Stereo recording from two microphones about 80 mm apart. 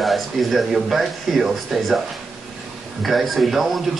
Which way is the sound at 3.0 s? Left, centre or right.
Centre.